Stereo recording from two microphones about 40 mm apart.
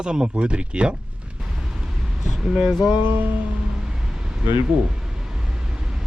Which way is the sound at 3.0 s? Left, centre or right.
Right.